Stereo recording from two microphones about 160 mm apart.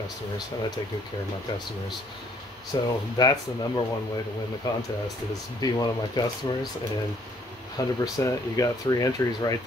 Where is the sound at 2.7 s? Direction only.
25° left (ahead or behind).